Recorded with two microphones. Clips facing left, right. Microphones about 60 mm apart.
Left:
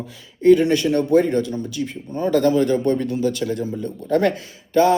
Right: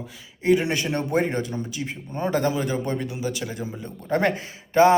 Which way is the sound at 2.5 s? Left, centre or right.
Centre.